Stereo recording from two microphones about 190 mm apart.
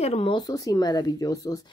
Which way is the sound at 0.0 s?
30° left (ahead or behind).